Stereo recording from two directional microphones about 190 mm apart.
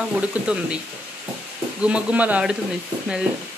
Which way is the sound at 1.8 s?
5° right (ahead or behind).